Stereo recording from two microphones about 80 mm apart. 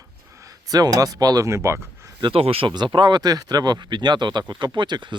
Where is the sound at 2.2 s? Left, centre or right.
Right.